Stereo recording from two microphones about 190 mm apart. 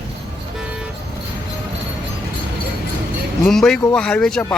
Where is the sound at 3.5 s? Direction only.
Centre (ahead or behind).